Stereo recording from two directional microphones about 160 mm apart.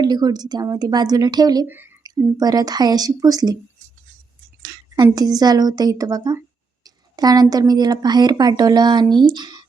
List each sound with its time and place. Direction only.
0.0 s speech: 25° right (ahead or behind)
1.6 s a woman's voice: 10° right (ahead or behind)
2.4 s speech: 25° right (ahead or behind)
4.6 s a sound: 25° right (ahead or behind)
5.0 s speech: 25° right (ahead or behind)
6.8 s a sound: 25° right (ahead or behind)
7.5 s speech: 25° right (ahead or behind)